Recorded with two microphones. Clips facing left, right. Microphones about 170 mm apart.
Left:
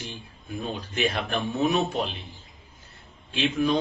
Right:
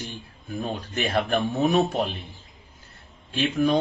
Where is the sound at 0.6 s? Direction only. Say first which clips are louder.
Left 1 dB; 45° right (ahead or behind).